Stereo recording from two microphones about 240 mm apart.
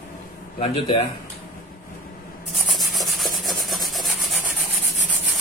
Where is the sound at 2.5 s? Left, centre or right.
Centre.